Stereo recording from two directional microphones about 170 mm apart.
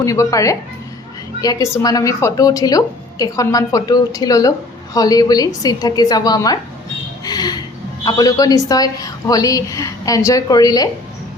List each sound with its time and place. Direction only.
0.0 s a woman's voice: 20° left (ahead or behind)